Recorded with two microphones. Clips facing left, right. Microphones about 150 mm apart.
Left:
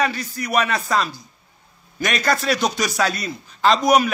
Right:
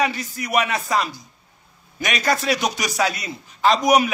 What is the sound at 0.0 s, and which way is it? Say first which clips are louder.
A man's voice: even; 20° right (ahead or behind).